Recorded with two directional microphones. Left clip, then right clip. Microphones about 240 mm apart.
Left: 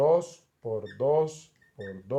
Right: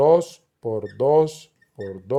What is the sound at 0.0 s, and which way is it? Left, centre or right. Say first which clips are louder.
Speech: right 7 dB; right.